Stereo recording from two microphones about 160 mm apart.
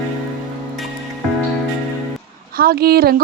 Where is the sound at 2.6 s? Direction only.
70° right (ahead or behind).